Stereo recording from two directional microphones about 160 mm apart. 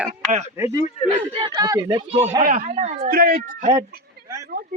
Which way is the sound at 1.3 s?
30° right (ahead or behind).